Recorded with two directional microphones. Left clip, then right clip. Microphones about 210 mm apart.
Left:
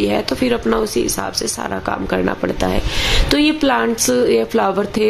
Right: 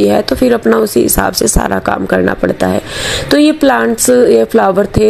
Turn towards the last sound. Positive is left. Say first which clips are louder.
# right 7 dB
turn(degrees=-25)  # may be behind; listen again after turning